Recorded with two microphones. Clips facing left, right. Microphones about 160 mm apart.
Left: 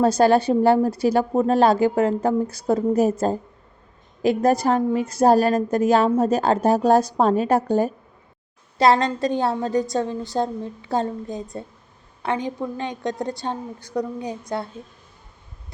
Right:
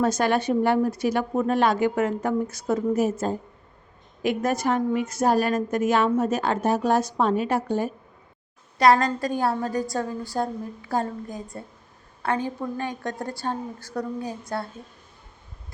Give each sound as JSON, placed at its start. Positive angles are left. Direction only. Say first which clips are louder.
{"t": 0.0, "sound": "a woman's voice", "louder": "left 6 dB", "side_deg": 35}
{"t": 8.8, "sound": "a woman's voice", "louder": "left 1 dB", "side_deg": 25}